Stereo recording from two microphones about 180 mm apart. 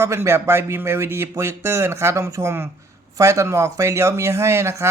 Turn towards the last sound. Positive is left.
turn(degrees=-15)  # may be behind; listen again after turning